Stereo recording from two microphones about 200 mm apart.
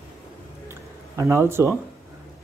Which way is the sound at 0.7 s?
15° right (ahead or behind).